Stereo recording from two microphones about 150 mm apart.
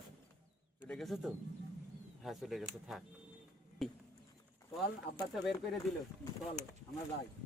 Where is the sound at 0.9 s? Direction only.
Centre (ahead or behind).